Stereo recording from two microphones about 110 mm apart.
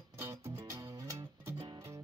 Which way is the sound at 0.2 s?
30° right (ahead or behind).